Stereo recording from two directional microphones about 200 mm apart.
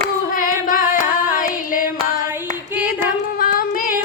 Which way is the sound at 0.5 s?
45° left (ahead or behind).